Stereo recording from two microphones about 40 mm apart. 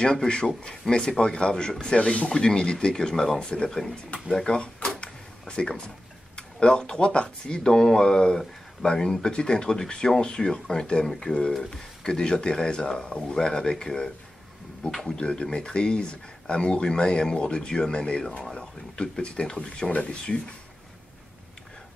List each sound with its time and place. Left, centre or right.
0.0 s speech: left
4.6 s drawer open or close: left
5.5 s speech: left
14.9 s speech: centre
15.1 s speech: left
19.9 s speech: left